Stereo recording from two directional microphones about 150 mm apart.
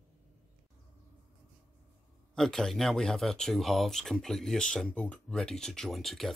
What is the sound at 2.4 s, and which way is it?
Speech, 5° left (ahead or behind).